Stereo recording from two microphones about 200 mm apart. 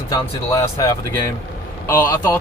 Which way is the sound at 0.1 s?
15° left (ahead or behind).